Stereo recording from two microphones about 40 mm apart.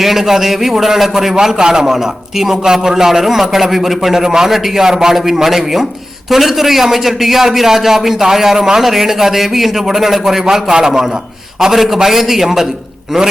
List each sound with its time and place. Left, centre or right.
0.0 s a man's voice: centre
10.4 s a man's voice: centre